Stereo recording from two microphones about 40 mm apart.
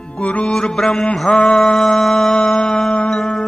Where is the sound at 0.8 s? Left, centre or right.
Centre.